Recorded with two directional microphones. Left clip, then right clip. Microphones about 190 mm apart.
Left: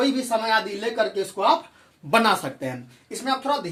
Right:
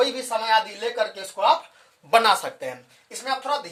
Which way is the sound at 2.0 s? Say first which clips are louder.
Right 2 dB; 35° right (ahead or behind).